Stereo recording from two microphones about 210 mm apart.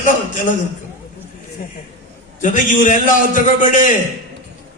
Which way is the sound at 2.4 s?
40° left (ahead or behind).